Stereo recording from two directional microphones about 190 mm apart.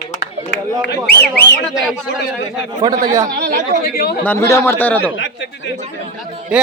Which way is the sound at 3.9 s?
55° left (ahead or behind).